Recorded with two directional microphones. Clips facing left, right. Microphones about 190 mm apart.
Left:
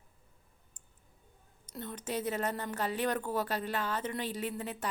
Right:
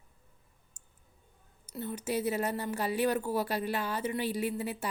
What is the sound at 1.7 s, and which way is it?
A woman's voice, 5° right (ahead or behind).